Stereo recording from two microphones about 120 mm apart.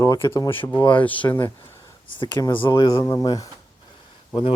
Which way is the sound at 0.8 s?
40° left (ahead or behind).